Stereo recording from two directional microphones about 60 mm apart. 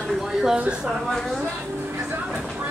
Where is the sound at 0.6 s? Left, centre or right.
Centre.